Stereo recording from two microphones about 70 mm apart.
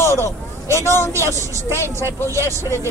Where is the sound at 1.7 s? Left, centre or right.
Left.